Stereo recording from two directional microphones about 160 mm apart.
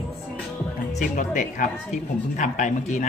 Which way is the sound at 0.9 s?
55° left (ahead or behind).